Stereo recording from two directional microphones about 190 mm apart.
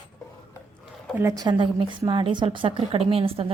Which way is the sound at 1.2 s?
15° right (ahead or behind).